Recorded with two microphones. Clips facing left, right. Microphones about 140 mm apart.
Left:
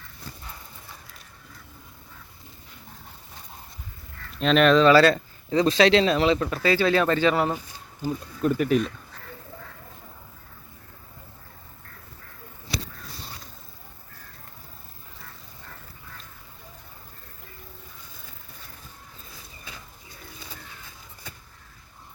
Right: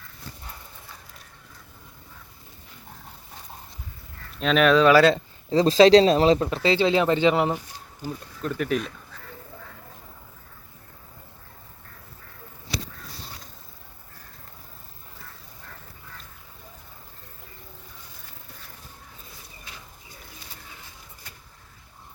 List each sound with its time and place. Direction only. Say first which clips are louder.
4.4 s speech: left 1 dB; centre (ahead or behind)
5.5 s speech: right 4 dB; 35° right (ahead or behind)
6.5 s speech: right 1 dB; 25° right (ahead or behind)
8.4 s speech: left 4 dB; 5° left (ahead or behind)